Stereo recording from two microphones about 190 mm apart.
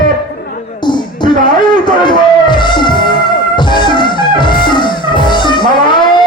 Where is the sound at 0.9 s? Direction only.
25° left (ahead or behind).